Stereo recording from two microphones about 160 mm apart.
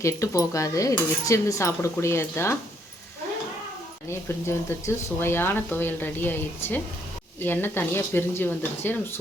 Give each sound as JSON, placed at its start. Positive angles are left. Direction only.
{"t": 0.0, "sound": "speech", "side_deg": 20}
{"t": 4.1, "sound": "speech", "side_deg": 15}